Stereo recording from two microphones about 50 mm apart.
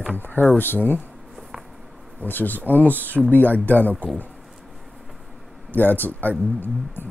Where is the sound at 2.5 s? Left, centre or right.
Right.